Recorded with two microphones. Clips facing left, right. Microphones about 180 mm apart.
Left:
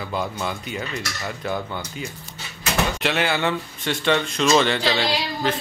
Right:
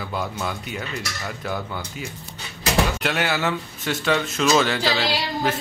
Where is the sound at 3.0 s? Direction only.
Centre (ahead or behind).